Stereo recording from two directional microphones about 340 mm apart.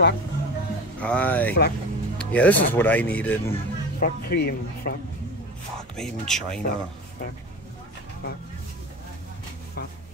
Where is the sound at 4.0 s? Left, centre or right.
Left.